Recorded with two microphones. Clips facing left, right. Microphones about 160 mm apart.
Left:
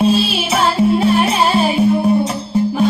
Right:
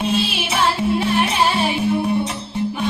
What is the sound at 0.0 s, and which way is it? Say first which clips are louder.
Music: left 6 dB; 35° left (ahead or behind).